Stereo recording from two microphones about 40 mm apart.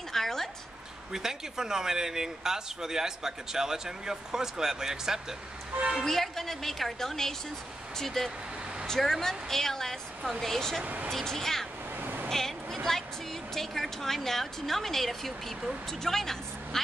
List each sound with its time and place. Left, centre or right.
0.1 s a sound: centre
1.1 s speech: centre
6.0 s a woman's voice: centre
12.0 s vehicle: right
12.3 s vehicle: centre
13.6 s a woman's voice: centre